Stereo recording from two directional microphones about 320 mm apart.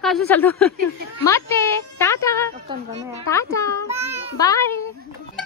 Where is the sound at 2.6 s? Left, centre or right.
Centre.